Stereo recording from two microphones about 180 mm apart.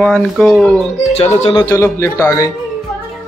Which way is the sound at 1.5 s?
20° left (ahead or behind).